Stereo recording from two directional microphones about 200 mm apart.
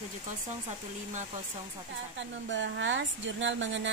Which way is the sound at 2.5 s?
65° right (ahead or behind).